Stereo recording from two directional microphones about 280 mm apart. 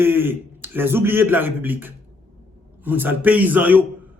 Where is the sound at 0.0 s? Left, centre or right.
Centre.